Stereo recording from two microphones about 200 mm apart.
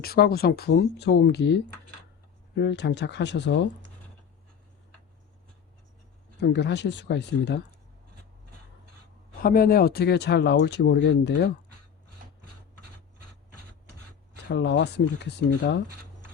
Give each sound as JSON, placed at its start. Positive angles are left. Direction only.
{"t": 0.0, "sound": "speech", "side_deg": 50}
{"t": 6.4, "sound": "speech", "side_deg": 60}
{"t": 9.4, "sound": "speech", "side_deg": 45}
{"t": 14.4, "sound": "speech", "side_deg": 60}